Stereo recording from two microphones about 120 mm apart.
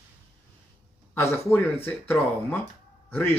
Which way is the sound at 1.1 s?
20° left (ahead or behind).